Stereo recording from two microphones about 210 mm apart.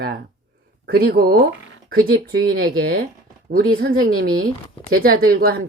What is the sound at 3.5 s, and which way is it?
Speech, 45° right (ahead or behind).